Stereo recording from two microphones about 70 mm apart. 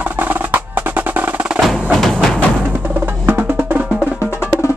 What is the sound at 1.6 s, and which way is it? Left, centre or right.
Percussion, centre.